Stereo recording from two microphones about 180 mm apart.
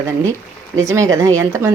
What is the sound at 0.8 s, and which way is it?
Speech, 15° right (ahead or behind).